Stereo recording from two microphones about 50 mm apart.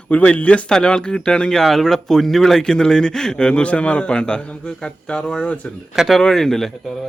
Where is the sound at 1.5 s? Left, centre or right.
Centre; by 5.7 s left.